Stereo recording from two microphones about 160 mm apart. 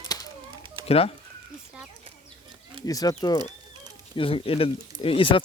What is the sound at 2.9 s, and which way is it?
Speech, 25° left (ahead or behind).